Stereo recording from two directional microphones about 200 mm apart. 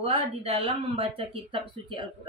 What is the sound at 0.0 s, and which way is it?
Speech, 30° right (ahead or behind).